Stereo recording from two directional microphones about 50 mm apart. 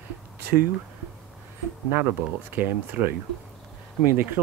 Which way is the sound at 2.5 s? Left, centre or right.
Right.